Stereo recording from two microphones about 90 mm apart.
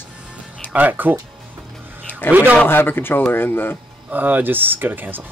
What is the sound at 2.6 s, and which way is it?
Speech, 25° left (ahead or behind).